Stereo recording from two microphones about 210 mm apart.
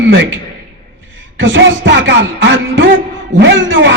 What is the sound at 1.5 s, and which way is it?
Speech, 65° right (ahead or behind).